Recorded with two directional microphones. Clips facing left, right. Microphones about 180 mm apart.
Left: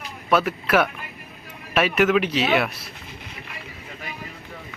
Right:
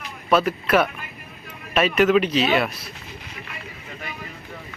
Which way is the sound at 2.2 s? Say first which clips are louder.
Right 2 dB; 70° left (ahead or behind).